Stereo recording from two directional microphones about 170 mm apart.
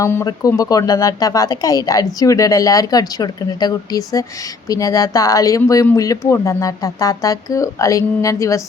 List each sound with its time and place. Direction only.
0.0 s speech: 15° left (ahead or behind)